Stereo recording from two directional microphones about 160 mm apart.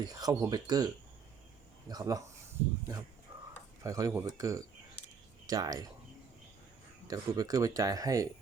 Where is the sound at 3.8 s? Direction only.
20° right (ahead or behind).